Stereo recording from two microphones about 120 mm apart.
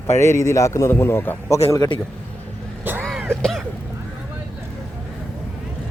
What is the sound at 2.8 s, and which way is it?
Vehicle, 15° right (ahead or behind).